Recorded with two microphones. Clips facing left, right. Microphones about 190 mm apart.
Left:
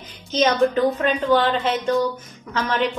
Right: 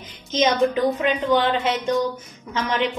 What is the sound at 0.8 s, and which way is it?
Speech, 10° right (ahead or behind).